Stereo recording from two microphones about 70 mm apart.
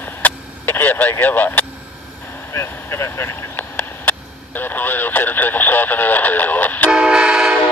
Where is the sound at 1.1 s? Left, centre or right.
Left.